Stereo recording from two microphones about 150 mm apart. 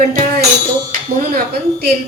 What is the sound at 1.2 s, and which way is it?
Speech, 90° right.